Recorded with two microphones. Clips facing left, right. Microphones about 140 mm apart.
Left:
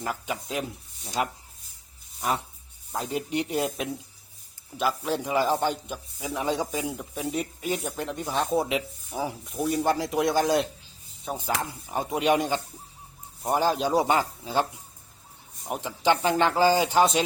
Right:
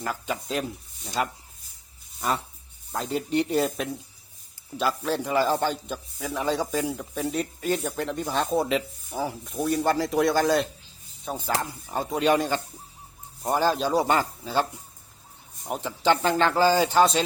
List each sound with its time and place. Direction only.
0.0 s a man's voice: 10° left (ahead or behind)
2.9 s a man's voice: 10° left (ahead or behind)
11.9 s a man's voice: 10° left (ahead or behind)
15.7 s a man's voice: 15° left (ahead or behind)